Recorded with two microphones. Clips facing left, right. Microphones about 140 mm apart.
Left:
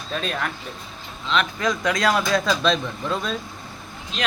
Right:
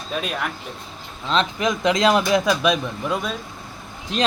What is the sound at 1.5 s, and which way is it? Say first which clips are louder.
Speech: right 3 dB; 20° right (ahead or behind).